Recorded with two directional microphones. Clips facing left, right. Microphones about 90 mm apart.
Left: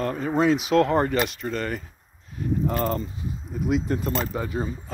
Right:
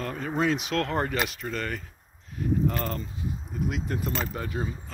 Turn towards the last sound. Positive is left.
turn(degrees=5)  # may be behind; listen again after turning